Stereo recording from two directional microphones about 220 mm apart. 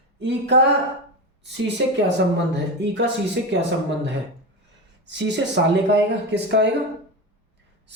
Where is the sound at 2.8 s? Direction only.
50° right (ahead or behind).